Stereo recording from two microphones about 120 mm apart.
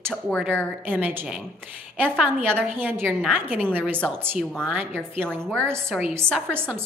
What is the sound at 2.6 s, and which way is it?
A woman's voice, 10° right (ahead or behind).